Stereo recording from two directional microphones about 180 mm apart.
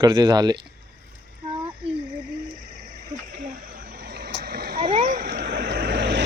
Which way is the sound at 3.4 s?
50° right (ahead or behind).